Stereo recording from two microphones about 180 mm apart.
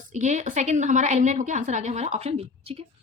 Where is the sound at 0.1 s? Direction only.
40° right (ahead or behind).